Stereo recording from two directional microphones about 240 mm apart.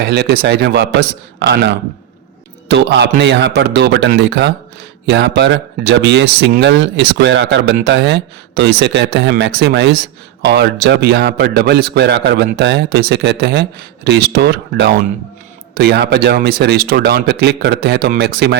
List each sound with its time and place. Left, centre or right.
0.0 s a man's voice: right